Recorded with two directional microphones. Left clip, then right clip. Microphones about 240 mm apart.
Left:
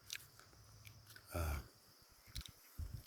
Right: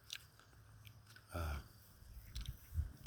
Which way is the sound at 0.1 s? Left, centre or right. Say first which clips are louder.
Left 1 dB; centre.